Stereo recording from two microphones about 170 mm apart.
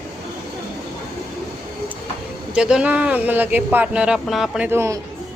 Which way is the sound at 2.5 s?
5° right (ahead or behind).